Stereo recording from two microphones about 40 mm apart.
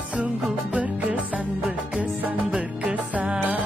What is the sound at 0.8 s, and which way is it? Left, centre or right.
Music, right.